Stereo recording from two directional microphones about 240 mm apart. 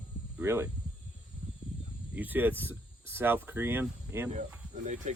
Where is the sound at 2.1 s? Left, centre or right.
Centre.